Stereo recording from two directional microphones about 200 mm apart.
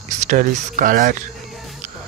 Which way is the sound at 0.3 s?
40° right (ahead or behind).